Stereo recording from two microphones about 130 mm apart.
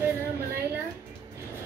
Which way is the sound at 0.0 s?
20° right (ahead or behind).